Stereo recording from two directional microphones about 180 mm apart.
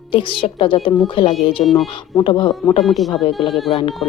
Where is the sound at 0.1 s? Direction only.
30° left (ahead or behind).